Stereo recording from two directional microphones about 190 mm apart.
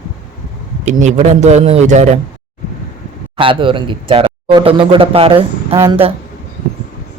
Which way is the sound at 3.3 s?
25° right (ahead or behind).